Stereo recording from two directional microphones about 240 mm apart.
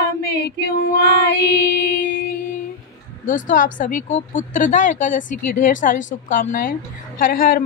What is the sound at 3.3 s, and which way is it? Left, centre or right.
A woman's voice, left.